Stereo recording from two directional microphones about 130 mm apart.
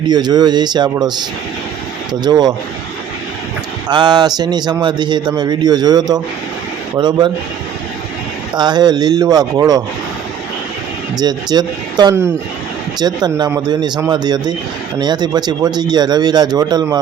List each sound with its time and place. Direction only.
0.1 s a man's voice: 30° right (ahead or behind)
2.2 s a man's voice: 35° right (ahead or behind)
3.8 s a man's voice: 35° right (ahead or behind)
8.5 s a man's voice: 35° right (ahead or behind)
11.2 s a man's voice: 30° right (ahead or behind)